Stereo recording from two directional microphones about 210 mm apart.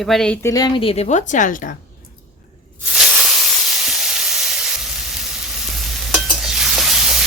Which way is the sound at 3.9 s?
Centre (ahead or behind).